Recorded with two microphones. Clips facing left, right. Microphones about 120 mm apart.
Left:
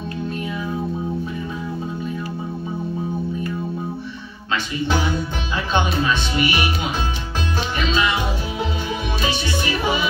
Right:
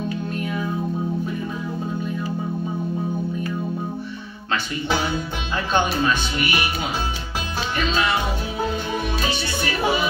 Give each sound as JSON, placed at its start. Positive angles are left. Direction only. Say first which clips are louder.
{"t": 7.9, "sound": "music", "louder": "left 1 dB", "side_deg": -40}